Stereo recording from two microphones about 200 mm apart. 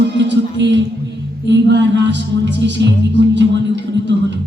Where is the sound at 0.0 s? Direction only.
60° right (ahead or behind).